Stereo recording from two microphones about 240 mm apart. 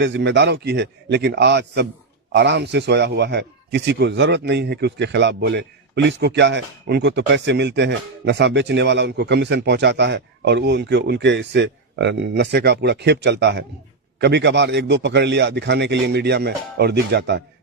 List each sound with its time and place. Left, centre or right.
0.0 s a man's voice: right